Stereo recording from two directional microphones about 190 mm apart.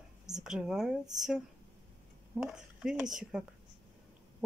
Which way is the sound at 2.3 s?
5° right (ahead or behind).